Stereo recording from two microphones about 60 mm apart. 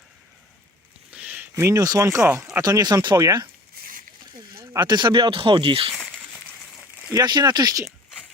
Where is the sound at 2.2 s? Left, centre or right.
Right.